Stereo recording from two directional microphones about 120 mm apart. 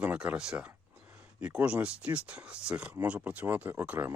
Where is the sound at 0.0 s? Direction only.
10° right (ahead or behind).